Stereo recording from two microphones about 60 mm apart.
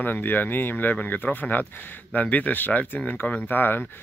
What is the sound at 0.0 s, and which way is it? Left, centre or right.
Speech, left.